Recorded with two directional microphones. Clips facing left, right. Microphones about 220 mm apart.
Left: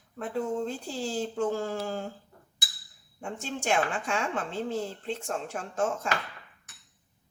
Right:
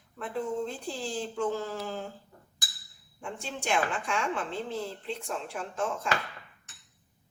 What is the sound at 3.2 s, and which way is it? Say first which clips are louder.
Speech: left 3 dB; 40° left (ahead or behind).